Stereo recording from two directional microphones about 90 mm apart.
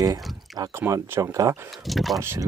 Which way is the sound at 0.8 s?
30° right (ahead or behind).